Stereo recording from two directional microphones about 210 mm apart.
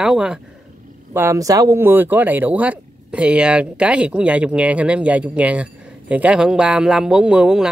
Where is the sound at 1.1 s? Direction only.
15° right (ahead or behind).